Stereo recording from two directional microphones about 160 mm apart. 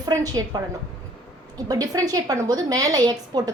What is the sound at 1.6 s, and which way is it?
A woman's voice, 25° right (ahead or behind).